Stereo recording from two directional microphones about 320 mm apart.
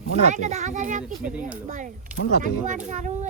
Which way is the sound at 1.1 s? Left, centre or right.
Centre.